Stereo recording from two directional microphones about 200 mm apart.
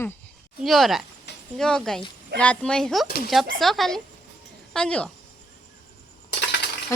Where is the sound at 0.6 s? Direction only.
Centre (ahead or behind).